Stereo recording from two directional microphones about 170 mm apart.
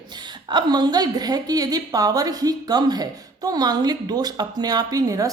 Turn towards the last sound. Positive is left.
turn(degrees=-20)  # may be behind; listen again after turning